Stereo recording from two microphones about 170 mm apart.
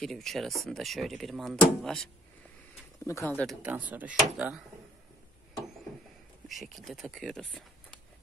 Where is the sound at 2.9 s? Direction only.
20° left (ahead or behind).